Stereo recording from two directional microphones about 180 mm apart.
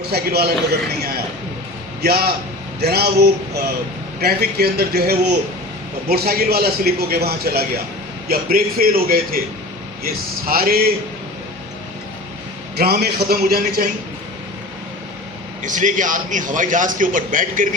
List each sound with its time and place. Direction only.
0.0 s a man's voice: 60° right (ahead or behind)
2.0 s a man's voice: 60° right (ahead or behind)
12.7 s a man's voice: 60° right (ahead or behind)
15.6 s a man's voice: 45° right (ahead or behind)